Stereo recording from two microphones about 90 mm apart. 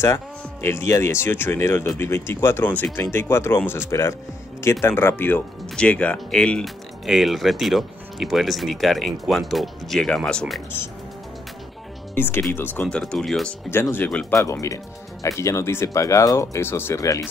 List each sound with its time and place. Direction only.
0.0 s speech: 30° left (ahead or behind); by 6.6 s 10° left (ahead or behind)
6.6 s speech: centre (ahead or behind)
12.2 s speech: 25° left (ahead or behind)
12.8 s speech: 10° left (ahead or behind)
13.7 s speech: 25° left (ahead or behind)
14.3 s speech: 35° left (ahead or behind)